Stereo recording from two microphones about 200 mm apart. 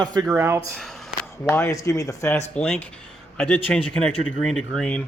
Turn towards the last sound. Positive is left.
turn(degrees=5)  # may be behind; listen again after turning